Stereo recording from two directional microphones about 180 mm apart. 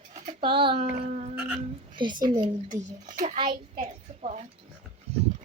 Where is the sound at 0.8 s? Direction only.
40° right (ahead or behind).